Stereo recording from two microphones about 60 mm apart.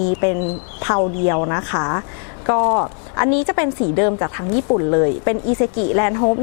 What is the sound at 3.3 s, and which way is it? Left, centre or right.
Speech, left.